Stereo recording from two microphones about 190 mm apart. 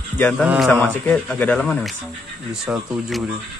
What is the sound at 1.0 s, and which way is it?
Speech, 5° left (ahead or behind).